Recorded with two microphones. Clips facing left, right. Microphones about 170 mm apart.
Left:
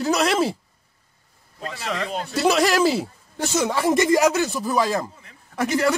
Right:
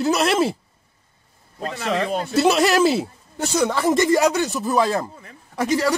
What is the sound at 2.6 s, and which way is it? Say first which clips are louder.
Speech: right 2 dB; 10° left (ahead or behind).